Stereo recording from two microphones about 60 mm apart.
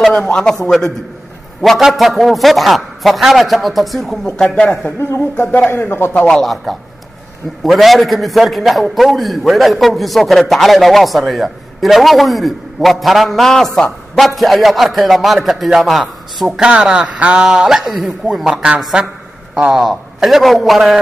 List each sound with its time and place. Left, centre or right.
0.3 s a man's voice: centre
5.7 s speech: left
6.1 s a man's voice: centre
6.4 s a man's voice: centre
16.4 s a man's voice: centre
19.7 s a man's voice: centre